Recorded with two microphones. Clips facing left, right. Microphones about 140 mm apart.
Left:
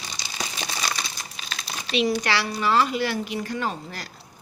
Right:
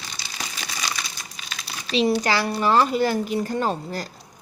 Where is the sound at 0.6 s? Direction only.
30° left (ahead or behind).